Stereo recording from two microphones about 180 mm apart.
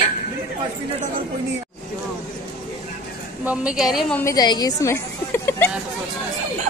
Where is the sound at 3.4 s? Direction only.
5° right (ahead or behind).